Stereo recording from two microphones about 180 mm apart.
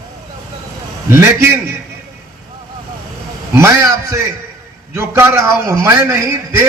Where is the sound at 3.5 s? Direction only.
15° right (ahead or behind).